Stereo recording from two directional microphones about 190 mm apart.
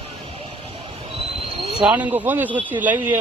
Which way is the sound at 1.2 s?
30° right (ahead or behind).